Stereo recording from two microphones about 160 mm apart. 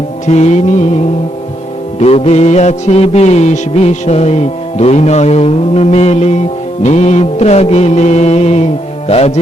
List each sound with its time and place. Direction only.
0.3 s music: 45° left (ahead or behind)
2.0 s music: 40° left (ahead or behind)